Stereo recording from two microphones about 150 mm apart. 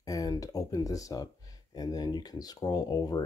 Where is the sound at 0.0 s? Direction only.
25° left (ahead or behind).